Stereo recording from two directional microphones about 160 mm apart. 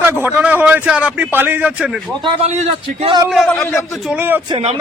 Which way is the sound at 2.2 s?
40° right (ahead or behind).